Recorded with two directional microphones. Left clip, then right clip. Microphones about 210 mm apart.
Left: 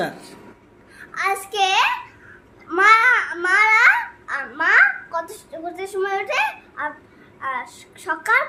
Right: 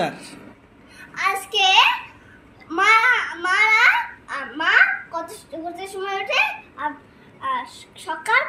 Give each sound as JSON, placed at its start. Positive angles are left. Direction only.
{"t": 0.0, "sound": "speech", "side_deg": 10}
{"t": 1.1, "sound": "a sound", "side_deg": 15}
{"t": 2.6, "sound": "babbling", "side_deg": 15}
{"t": 7.4, "sound": "a woman's voice", "side_deg": 15}